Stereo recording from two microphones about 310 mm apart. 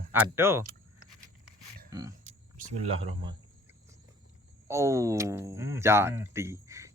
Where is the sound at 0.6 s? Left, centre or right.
Right.